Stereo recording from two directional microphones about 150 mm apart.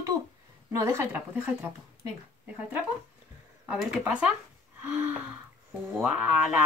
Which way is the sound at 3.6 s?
5° right (ahead or behind).